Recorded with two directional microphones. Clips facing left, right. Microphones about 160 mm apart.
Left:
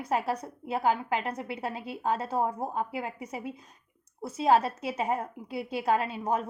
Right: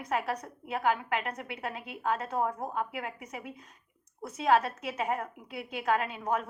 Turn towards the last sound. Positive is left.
turn(degrees=30)  # may be behind; listen again after turning